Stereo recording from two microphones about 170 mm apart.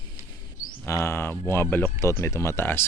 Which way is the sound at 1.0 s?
15° left (ahead or behind).